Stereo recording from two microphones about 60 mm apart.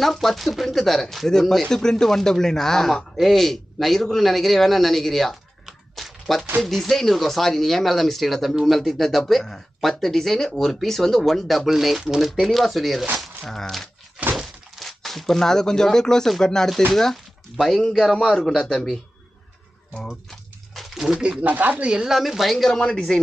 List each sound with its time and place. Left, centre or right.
0.0 s a man's voice: centre
20.2 s a sound: centre
21.5 s speech: right
21.8 s speech: centre